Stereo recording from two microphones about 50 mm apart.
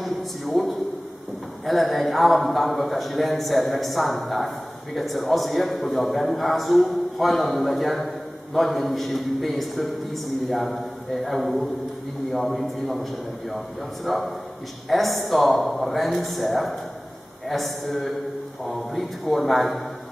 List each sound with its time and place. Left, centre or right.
0.0 s a sound: centre
1.7 s a man's voice: centre
14.0 s a man's voice: centre